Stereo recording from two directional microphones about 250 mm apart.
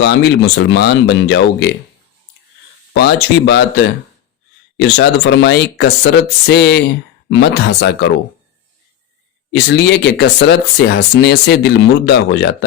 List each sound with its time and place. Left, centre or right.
0.0 s speech: left
2.9 s speech: left
9.5 s speech: left